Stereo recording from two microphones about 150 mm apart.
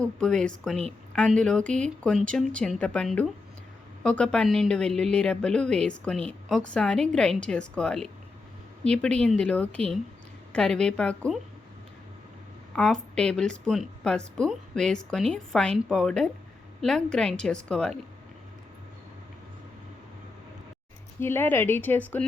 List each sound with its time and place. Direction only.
0.0 s a woman's voice: 5° left (ahead or behind)
12.7 s a woman's voice: 5° left (ahead or behind)
21.2 s speech: 15° left (ahead or behind)